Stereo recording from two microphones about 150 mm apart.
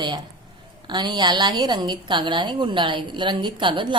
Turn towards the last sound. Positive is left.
turn(degrees=-35)  # may be behind; listen again after turning